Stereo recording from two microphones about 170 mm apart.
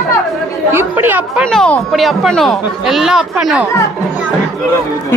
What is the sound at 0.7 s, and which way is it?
Speech, 10° right (ahead or behind).